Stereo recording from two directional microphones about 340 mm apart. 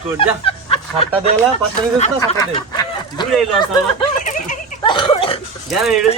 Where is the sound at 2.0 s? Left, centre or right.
Centre.